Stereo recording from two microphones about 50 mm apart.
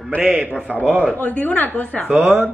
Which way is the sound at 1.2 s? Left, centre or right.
Left.